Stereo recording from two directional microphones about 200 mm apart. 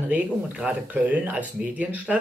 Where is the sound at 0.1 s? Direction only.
5° right (ahead or behind).